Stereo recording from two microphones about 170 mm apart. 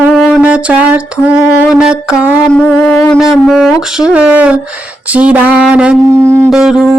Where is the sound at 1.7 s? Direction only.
5° right (ahead or behind).